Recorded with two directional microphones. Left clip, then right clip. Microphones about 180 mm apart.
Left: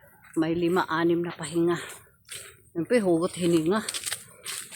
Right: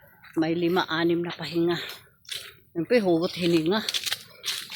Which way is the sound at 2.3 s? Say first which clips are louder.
Right 7 dB; 60° right (ahead or behind).